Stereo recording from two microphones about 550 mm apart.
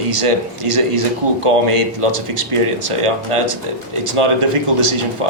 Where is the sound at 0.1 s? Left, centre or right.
Right.